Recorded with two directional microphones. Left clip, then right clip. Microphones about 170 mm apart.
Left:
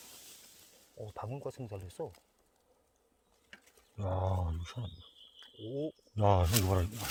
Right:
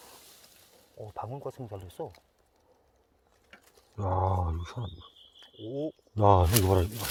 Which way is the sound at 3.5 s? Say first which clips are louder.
Right 6 dB; 45° right (ahead or behind).